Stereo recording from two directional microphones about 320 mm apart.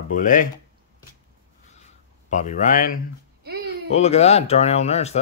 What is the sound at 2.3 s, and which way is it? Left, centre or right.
Speech, left.